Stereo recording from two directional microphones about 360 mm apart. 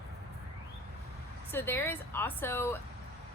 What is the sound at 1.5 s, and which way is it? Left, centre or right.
A woman's voice, centre.